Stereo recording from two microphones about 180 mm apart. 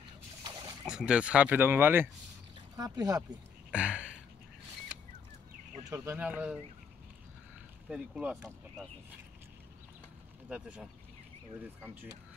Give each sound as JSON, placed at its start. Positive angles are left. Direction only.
{"t": 0.4, "sound": "a sound", "side_deg": -25}
{"t": 0.8, "sound": "speech", "side_deg": -5}
{"t": 3.7, "sound": "a sound", "side_deg": -5}
{"t": 5.9, "sound": "speech", "side_deg": -15}
{"t": 7.9, "sound": "speech", "side_deg": -5}
{"t": 10.5, "sound": "speech", "side_deg": -5}